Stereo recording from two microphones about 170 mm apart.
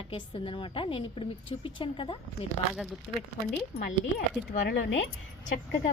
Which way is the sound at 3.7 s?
65° left (ahead or behind).